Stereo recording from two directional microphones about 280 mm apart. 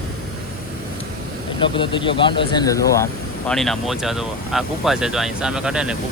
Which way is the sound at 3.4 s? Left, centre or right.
Centre.